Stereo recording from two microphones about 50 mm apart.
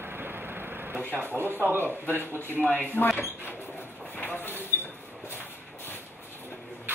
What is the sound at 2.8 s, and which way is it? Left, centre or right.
Speech, left.